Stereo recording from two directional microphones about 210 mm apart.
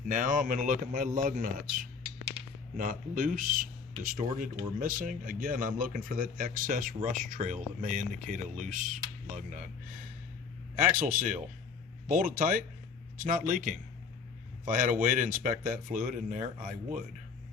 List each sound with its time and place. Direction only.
0.1 s a man's voice: 40° right (ahead or behind)
2.0 s a sound: 25° right (ahead or behind)
2.7 s a man's voice: 40° right (ahead or behind)
10.9 s a man's voice: 40° right (ahead or behind)